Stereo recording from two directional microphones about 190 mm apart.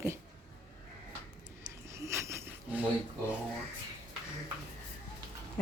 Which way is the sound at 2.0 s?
15° right (ahead or behind).